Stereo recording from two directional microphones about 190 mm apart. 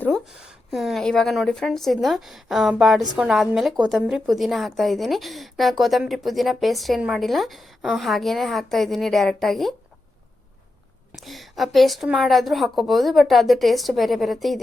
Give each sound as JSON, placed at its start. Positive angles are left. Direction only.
{"t": 0.0, "sound": "a woman's voice", "side_deg": 0}
{"t": 11.1, "sound": "a woman's voice", "side_deg": 0}